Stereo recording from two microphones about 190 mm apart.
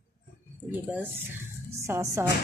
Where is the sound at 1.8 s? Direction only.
15° right (ahead or behind).